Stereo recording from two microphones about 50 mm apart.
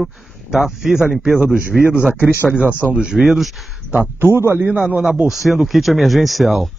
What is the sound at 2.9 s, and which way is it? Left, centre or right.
Speech, centre.